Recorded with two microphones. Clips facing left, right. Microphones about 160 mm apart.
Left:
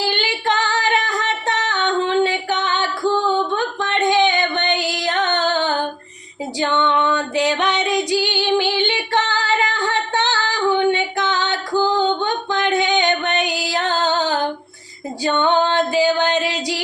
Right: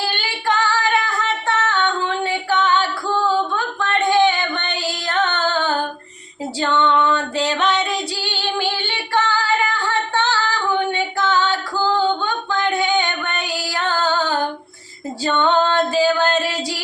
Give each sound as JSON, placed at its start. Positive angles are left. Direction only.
{"t": 0.1, "sound": "female singing", "side_deg": 20}
{"t": 9.1, "sound": "music", "side_deg": 20}